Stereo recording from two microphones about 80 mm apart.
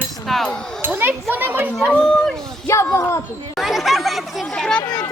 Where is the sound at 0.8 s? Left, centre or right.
Right.